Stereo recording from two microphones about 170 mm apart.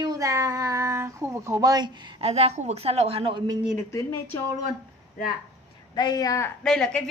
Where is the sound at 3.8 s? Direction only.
15° left (ahead or behind).